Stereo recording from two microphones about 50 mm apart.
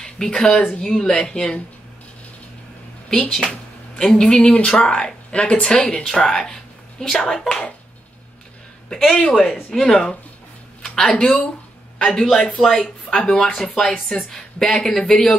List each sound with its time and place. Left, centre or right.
0.0 s speech: centre
3.1 s speech: centre
8.8 s speech: centre
12.0 s a man's voice: centre